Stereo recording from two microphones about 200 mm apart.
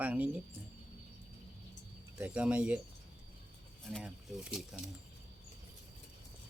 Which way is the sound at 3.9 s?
Centre (ahead or behind).